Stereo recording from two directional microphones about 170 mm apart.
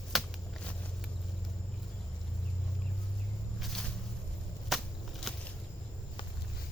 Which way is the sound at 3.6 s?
5° left (ahead or behind).